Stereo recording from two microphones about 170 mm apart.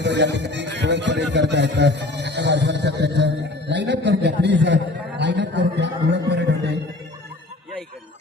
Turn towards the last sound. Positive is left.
turn(degrees=-90)